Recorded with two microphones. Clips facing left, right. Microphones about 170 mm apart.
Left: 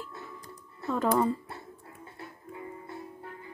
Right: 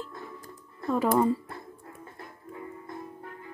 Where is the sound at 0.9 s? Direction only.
5° right (ahead or behind).